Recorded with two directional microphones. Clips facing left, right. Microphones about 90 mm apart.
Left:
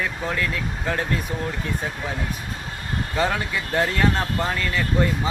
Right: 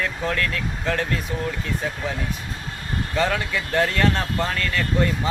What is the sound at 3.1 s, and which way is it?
Speech, 20° left (ahead or behind).